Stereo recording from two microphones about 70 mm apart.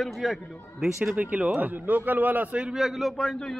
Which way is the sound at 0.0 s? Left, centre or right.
Centre.